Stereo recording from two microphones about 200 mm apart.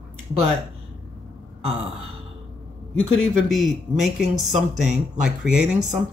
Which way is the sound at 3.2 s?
Centre (ahead or behind).